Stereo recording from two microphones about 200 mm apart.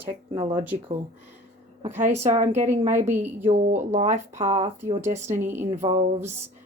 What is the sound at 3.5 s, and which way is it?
Speech, 35° right (ahead or behind).